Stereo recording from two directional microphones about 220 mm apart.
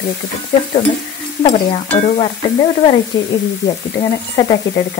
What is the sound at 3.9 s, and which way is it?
Frying, 20° left (ahead or behind).